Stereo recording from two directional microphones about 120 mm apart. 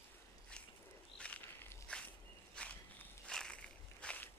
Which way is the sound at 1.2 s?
10° left (ahead or behind).